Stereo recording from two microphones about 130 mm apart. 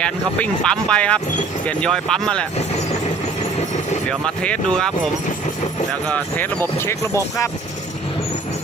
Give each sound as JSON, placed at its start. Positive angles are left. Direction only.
{"t": 0.0, "sound": "speech", "side_deg": 5}
{"t": 4.4, "sound": "speech", "side_deg": 5}
{"t": 6.1, "sound": "speech", "side_deg": 15}